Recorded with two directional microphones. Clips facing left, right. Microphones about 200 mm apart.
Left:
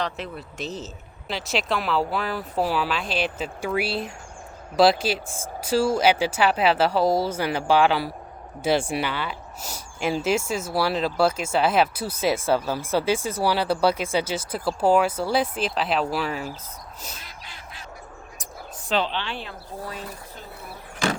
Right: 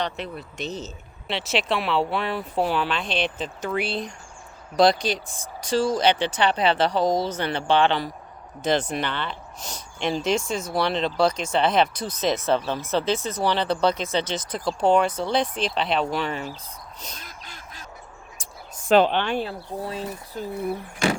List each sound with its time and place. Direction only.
0.0 s speech: centre (ahead or behind)
17.2 s quack: 45° right (ahead or behind)
18.9 s a woman's voice: 50° right (ahead or behind)
19.8 s speech: 30° right (ahead or behind)